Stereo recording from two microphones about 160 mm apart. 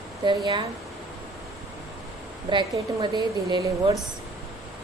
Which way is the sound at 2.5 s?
30° right (ahead or behind).